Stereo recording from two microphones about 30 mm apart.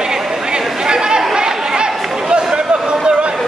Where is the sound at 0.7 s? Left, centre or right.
Right.